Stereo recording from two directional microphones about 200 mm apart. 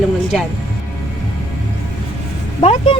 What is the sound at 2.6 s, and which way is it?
Speech, 25° left (ahead or behind).